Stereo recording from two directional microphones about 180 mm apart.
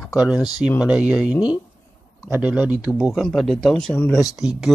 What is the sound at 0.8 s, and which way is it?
Speech, 5° right (ahead or behind).